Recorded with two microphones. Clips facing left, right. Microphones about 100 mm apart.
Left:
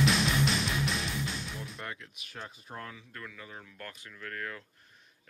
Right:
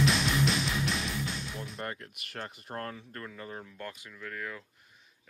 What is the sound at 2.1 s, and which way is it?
Speech, 65° right (ahead or behind).